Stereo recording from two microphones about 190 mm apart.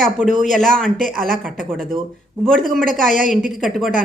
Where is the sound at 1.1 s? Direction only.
50° right (ahead or behind).